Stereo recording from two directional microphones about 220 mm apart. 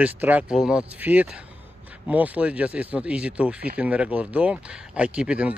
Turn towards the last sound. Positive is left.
turn(degrees=-5)  # may be behind; listen again after turning